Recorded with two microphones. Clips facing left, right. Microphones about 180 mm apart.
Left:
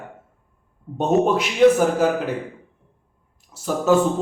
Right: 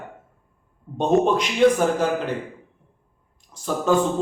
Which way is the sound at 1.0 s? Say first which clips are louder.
Even; 5° left (ahead or behind).